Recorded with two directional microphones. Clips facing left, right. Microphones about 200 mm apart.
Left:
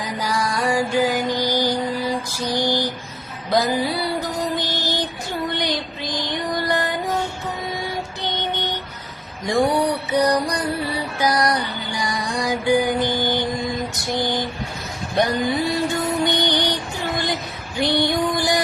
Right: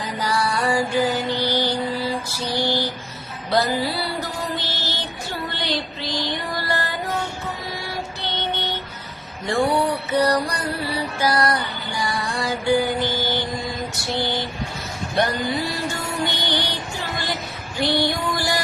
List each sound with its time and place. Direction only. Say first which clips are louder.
0.0 s music: even; 10° left (ahead or behind)
2.3 s mantra: left 2 dB; 15° left (ahead or behind)
2.6 s a sound: left 1 dB; 15° left (ahead or behind)
3.5 s music: left 1 dB; 15° left (ahead or behind)